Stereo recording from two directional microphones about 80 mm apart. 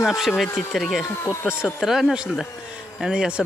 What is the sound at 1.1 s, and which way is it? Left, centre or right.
Speech, left.